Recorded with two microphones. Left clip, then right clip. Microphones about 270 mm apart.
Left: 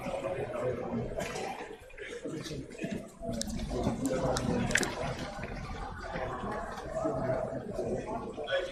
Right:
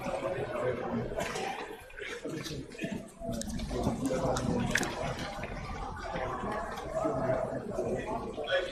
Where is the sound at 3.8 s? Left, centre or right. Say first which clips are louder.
Even; centre.